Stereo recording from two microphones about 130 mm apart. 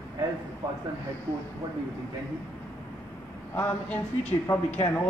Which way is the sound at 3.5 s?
15° left (ahead or behind).